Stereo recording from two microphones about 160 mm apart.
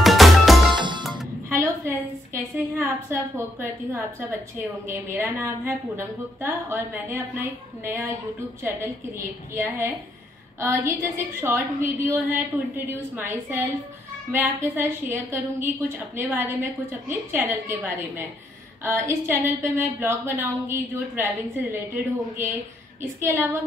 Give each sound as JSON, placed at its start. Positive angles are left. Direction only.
{"t": 0.0, "sound": "music", "side_deg": 0}
{"t": 0.7, "sound": "music", "side_deg": -30}
{"t": 1.5, "sound": "a sound", "side_deg": -15}
{"t": 3.9, "sound": "a woman's voice", "side_deg": -15}
{"t": 9.6, "sound": "a woman's voice", "side_deg": -15}
{"t": 23.2, "sound": "a woman's voice", "side_deg": -15}